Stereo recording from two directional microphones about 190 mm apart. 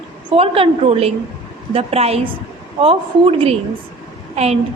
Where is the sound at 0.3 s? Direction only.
30° right (ahead or behind).